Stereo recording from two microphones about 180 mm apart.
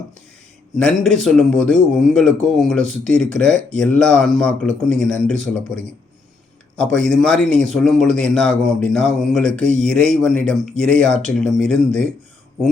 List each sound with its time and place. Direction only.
0.8 s speech: 5° left (ahead or behind)
6.7 s speech: 5° left (ahead or behind)